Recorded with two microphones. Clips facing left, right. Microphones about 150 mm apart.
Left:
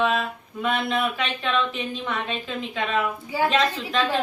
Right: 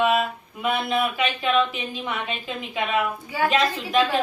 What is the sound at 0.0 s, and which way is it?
A woman's voice, 10° right (ahead or behind).